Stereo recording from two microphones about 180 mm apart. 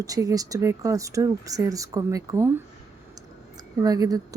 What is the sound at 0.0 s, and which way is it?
Speech, 20° right (ahead or behind).